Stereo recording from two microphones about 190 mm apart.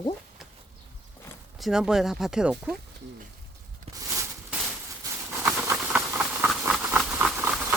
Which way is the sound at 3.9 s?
30° right (ahead or behind).